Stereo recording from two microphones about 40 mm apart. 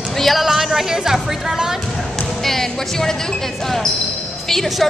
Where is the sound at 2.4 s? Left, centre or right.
Centre.